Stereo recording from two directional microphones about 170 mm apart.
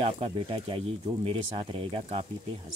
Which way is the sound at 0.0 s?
35° right (ahead or behind).